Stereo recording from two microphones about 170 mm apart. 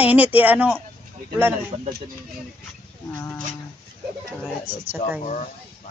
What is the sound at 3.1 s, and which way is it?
Livestock, 25° left (ahead or behind).